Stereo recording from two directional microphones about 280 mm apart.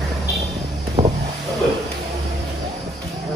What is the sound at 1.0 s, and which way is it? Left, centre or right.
Vehicle, centre.